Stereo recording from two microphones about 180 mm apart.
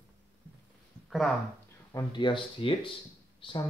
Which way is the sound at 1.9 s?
20° left (ahead or behind).